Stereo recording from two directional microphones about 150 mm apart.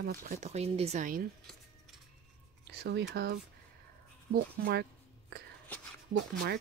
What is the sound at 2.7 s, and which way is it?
Speech, 90° right.